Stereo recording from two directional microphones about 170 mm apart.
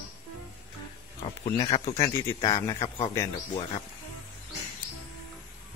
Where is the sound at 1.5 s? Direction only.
25° left (ahead or behind).